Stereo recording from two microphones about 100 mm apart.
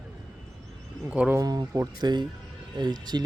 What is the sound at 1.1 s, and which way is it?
Speech, 10° right (ahead or behind).